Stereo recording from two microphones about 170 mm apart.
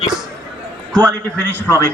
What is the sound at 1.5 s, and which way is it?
Speech, 15° left (ahead or behind).